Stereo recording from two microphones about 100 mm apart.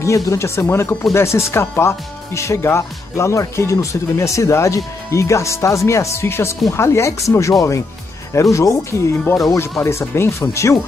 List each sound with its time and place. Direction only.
0.0 s speech: 30° left (ahead or behind)